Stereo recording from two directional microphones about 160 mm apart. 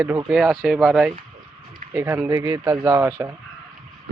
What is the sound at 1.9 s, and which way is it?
Speech, 15° right (ahead or behind).